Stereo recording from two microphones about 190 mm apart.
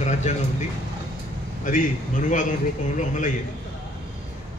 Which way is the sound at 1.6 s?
45° left (ahead or behind).